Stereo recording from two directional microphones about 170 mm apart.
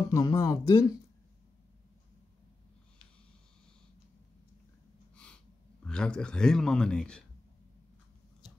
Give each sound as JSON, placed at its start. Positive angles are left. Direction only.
{"t": 0.1, "sound": "speech", "side_deg": 20}
{"t": 5.1, "sound": "snort", "side_deg": 5}
{"t": 5.9, "sound": "a man's voice", "side_deg": 5}